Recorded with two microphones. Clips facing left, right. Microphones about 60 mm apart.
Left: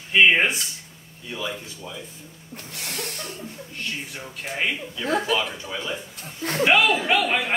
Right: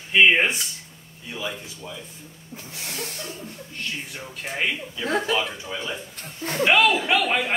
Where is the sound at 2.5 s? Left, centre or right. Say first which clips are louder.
Left 1 dB; left.